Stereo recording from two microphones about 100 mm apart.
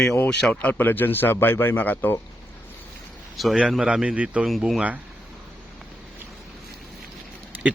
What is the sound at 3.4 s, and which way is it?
A man's voice, centre (ahead or behind).